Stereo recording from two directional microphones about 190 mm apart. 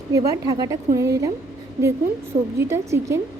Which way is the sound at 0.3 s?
20° right (ahead or behind).